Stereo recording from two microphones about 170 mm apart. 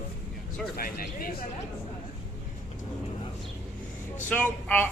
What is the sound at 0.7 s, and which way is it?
Speech, 60° left (ahead or behind).